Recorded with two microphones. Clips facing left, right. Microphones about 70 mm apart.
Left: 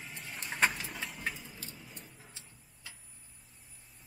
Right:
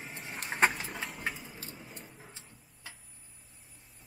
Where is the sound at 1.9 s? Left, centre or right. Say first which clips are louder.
Right 3 dB; right.